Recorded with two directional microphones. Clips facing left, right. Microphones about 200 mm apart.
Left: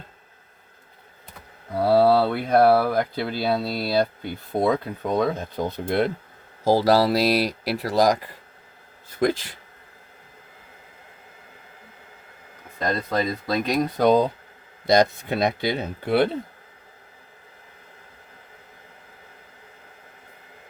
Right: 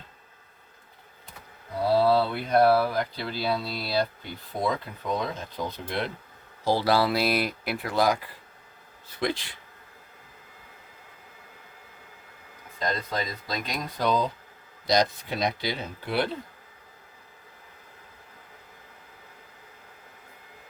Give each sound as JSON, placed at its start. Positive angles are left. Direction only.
{"t": 1.8, "sound": "speech", "side_deg": 60}
{"t": 6.7, "sound": "speech", "side_deg": 40}
{"t": 12.8, "sound": "speech", "side_deg": 50}
{"t": 15.3, "sound": "speech", "side_deg": 55}